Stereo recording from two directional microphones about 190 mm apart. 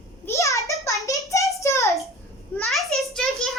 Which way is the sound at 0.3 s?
15° left (ahead or behind).